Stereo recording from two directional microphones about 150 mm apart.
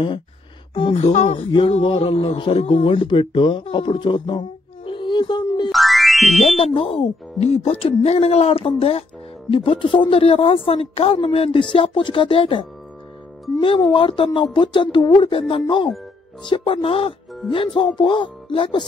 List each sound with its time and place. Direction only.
0.9 s speech: 50° left (ahead or behind)
1.5 s a man's voice: 35° left (ahead or behind)
5.7 s music: centre (ahead or behind)
6.4 s speech: 40° left (ahead or behind)